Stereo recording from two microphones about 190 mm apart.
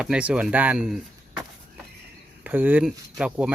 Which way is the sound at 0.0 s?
5° right (ahead or behind).